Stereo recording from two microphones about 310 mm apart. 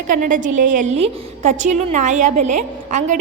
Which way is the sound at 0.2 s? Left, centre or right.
Right.